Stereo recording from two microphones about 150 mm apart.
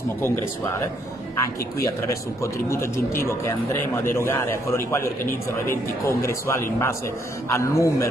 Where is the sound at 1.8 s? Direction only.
20° left (ahead or behind).